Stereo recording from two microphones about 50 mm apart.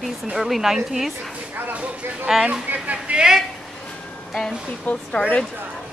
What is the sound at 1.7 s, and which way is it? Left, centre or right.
Speech, right.